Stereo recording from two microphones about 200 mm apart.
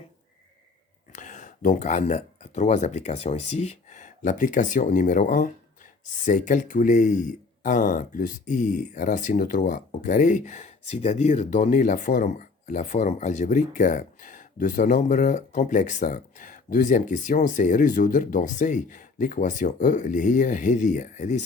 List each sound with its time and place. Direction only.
1.1 s speech: 40° left (ahead or behind)